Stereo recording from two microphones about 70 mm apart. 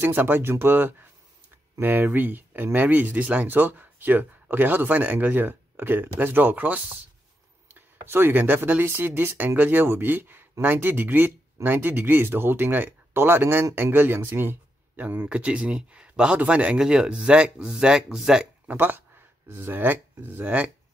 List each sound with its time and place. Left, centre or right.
0.0 s speech: right
15.2 s speech: centre
18.7 s speech: right